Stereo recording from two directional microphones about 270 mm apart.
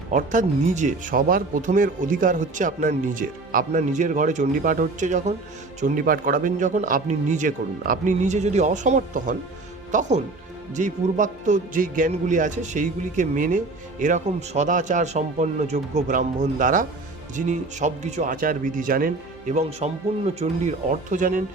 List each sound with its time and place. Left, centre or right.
0.1 s speech: right